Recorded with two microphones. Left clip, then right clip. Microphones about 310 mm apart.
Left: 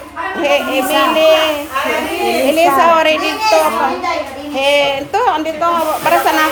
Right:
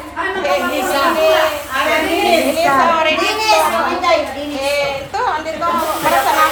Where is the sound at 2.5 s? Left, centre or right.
Left.